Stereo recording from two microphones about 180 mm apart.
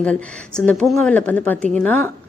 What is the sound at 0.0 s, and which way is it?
A woman's voice, 5° left (ahead or behind).